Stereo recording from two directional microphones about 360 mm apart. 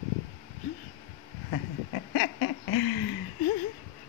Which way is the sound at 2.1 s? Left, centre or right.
Left.